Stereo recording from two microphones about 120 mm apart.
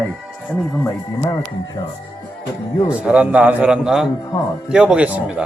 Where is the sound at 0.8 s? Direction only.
20° left (ahead or behind).